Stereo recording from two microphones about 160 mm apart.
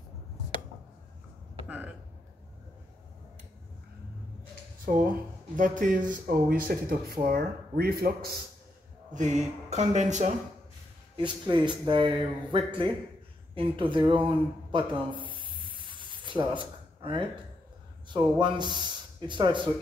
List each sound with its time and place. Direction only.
1.7 s a sound: 10° right (ahead or behind)
4.9 s speech: 60° right (ahead or behind)
9.1 s speech: 50° right (ahead or behind)
11.1 s a man's voice: 30° right (ahead or behind)
13.6 s a sound: 30° right (ahead or behind)
18.0 s speech: 30° right (ahead or behind)